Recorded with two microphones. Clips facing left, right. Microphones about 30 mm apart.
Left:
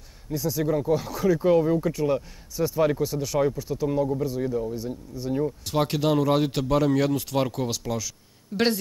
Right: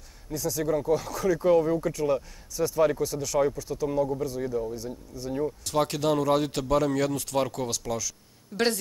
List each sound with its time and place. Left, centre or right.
0.3 s speech: centre